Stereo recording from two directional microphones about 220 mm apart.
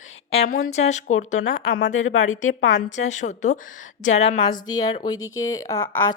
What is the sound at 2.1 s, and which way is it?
Speech, 35° left (ahead or behind).